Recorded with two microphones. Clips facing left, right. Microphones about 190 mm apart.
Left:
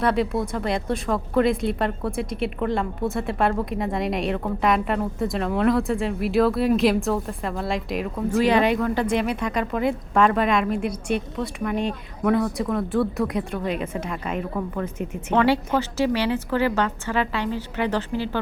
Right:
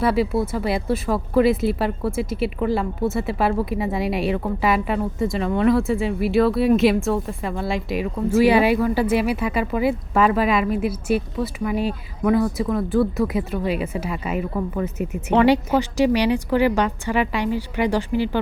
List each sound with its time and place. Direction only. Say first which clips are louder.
0.0 s a woman's voice: right 2 dB; 5° right (ahead or behind)